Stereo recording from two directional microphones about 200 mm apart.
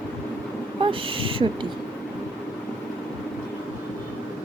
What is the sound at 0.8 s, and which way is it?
Speech, 25° right (ahead or behind).